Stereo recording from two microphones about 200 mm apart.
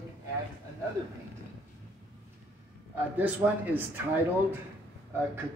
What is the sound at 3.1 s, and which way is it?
Speech, 10° right (ahead or behind).